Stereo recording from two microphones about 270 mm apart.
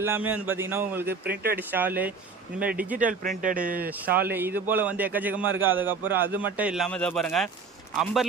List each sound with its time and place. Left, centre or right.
0.0 s a man's voice: centre
1.3 s speech: right
1.5 s a man's voice: centre
2.9 s speech: right
4.3 s a man's voice: centre